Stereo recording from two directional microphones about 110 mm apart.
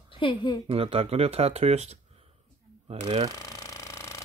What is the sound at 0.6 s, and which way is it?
Speech, 60° right (ahead or behind).